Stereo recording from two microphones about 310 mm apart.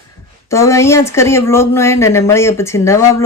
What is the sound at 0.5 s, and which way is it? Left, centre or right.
Speech, centre.